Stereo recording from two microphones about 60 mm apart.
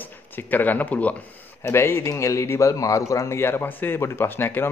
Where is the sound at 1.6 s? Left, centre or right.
Left.